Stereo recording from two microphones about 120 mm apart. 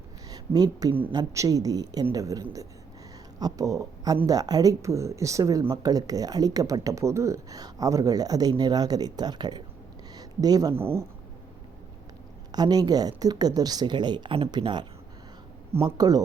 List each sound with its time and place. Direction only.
0.3 s speech: 35° right (ahead or behind)
10.8 s speech: 20° right (ahead or behind)
12.5 s speech: 35° right (ahead or behind)
15.7 s speech: 30° right (ahead or behind)